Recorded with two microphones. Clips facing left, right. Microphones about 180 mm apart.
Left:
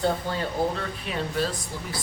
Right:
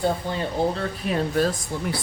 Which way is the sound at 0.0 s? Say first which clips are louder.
Right 1 dB; 15° right (ahead or behind).